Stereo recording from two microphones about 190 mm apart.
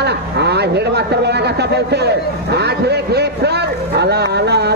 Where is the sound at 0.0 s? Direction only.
60° right (ahead or behind).